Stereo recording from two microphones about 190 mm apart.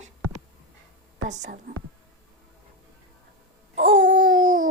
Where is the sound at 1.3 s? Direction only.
40° right (ahead or behind).